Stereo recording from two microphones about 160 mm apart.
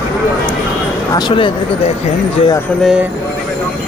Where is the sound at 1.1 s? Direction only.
30° left (ahead or behind).